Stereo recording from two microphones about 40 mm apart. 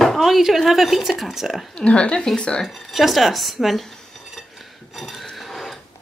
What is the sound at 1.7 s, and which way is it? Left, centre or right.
Speech, left.